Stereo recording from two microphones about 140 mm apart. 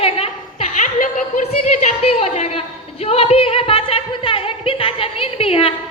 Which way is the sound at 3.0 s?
45° left (ahead or behind).